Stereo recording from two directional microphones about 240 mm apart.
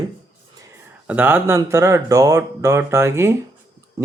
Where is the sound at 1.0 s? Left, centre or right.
Centre.